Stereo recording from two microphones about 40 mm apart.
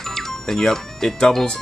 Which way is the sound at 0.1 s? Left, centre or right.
Centre.